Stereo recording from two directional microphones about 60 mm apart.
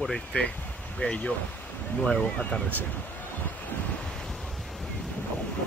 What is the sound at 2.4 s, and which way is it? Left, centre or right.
Speech, left.